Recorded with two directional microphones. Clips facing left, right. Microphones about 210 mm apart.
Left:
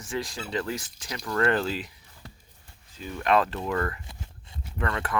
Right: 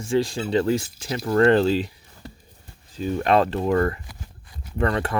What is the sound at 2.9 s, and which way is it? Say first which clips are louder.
Speech: right 5 dB; 35° right (ahead or behind).